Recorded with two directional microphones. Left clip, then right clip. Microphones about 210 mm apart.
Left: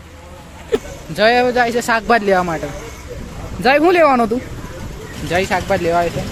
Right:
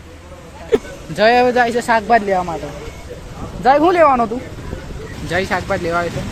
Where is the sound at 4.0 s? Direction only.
35° left (ahead or behind).